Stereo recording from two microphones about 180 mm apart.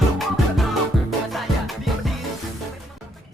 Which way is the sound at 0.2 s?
Centre (ahead or behind).